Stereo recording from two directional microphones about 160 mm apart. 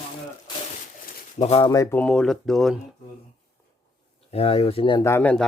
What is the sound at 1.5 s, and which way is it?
Speech, 40° left (ahead or behind).